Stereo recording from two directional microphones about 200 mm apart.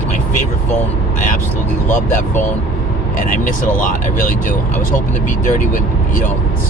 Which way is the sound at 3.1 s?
40° left (ahead or behind).